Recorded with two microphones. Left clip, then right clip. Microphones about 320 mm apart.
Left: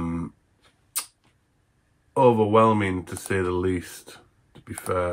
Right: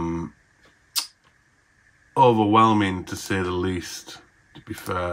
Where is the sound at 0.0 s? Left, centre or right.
Centre.